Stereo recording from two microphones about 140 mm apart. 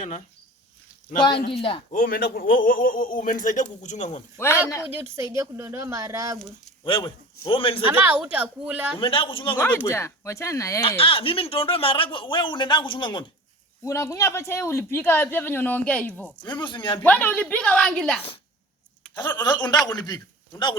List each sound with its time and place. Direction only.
1.2 s speech: 35° left (ahead or behind)
1.9 s speech: 90° left; by 4.2 s 60° left (ahead or behind)
4.4 s speech: 20° left (ahead or behind)
4.9 s speech: 20° right (ahead or behind)
6.8 s speech: 40° left (ahead or behind)
7.9 s a woman's voice: 10° right (ahead or behind)
9.0 s speech: 40° left (ahead or behind)
9.6 s speech: 10° left (ahead or behind)
10.8 s speech: 40° left (ahead or behind)
13.8 s speech: 20° left (ahead or behind)
16.4 s speech: 35° left (ahead or behind)
17.0 s speech: 10° left (ahead or behind)
19.1 s a man's voice: 30° left (ahead or behind)